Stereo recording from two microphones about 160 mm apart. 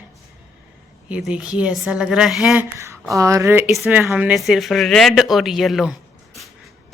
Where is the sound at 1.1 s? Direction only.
5° right (ahead or behind).